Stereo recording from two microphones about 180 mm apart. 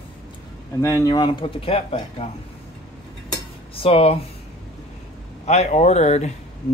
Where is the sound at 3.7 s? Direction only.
30° left (ahead or behind).